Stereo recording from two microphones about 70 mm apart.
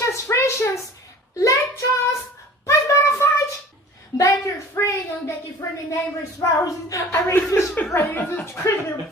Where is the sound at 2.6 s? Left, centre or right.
Left.